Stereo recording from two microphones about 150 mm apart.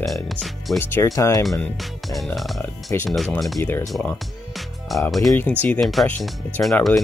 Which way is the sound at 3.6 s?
20° left (ahead or behind).